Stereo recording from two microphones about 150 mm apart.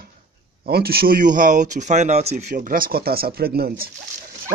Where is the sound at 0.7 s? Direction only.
90° right.